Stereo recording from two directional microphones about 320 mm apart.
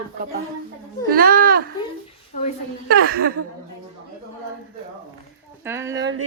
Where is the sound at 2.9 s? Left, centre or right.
Right.